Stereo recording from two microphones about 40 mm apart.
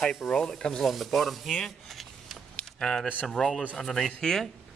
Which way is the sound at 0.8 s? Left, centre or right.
Centre.